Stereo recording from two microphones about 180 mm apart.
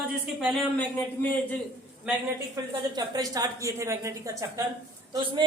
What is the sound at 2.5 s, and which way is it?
A woman's voice, 20° right (ahead or behind).